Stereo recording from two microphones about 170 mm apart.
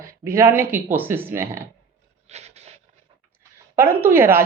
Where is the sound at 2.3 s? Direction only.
40° right (ahead or behind).